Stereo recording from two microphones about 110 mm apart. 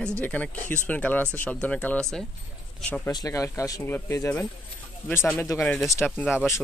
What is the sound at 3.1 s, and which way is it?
Speech, 30° left (ahead or behind).